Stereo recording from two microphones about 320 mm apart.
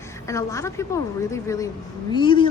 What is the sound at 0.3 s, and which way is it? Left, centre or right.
A woman's voice, centre.